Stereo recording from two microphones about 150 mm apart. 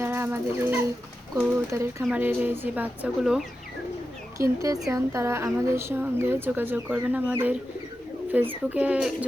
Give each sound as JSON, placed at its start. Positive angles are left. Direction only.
{"t": 0.0, "sound": "a sound", "side_deg": -15}
{"t": 1.4, "sound": "a woman's voice", "side_deg": -15}
{"t": 4.4, "sound": "a woman's voice", "side_deg": -20}